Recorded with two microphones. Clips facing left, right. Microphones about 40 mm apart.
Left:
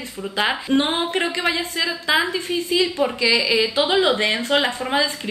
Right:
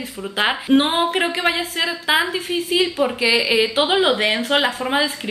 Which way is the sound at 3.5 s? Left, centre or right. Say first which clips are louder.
Right 1 dB; right.